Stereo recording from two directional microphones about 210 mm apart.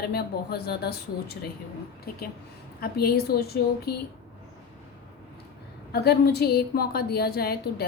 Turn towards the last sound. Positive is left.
turn(degrees=50)  # may be behind; listen again after turning